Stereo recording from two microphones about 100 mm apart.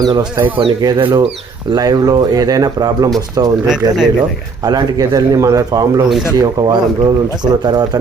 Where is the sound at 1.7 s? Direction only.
40° right (ahead or behind).